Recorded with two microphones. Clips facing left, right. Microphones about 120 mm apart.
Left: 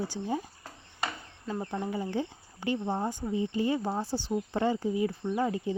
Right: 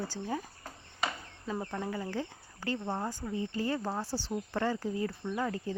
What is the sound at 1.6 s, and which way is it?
Speech, 15° left (ahead or behind).